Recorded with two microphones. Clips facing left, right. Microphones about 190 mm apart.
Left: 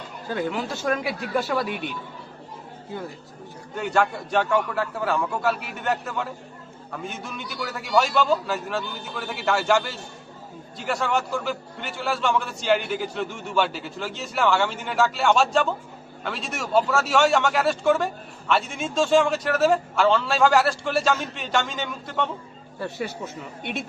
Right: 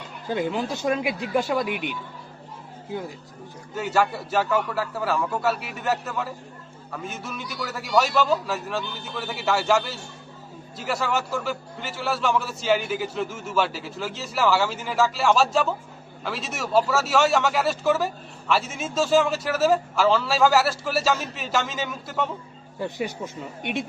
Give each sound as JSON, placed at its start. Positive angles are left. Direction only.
{"t": 0.3, "sound": "speech", "side_deg": -15}
{"t": 3.8, "sound": "a man's voice", "side_deg": -5}